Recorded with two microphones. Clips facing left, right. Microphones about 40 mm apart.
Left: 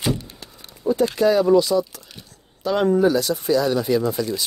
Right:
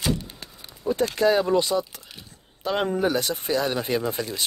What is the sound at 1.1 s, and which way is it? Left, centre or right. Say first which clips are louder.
Speech: left 4 dB; right.